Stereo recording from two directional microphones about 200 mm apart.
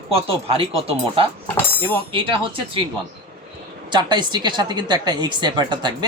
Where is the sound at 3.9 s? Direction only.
20° right (ahead or behind).